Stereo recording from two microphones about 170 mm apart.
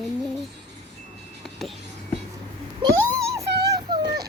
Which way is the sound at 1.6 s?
Centre (ahead or behind).